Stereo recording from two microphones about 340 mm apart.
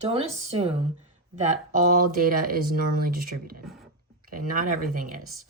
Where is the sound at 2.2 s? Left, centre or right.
Right.